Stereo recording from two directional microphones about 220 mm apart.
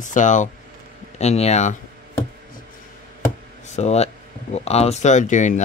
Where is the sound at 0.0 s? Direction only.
35° left (ahead or behind).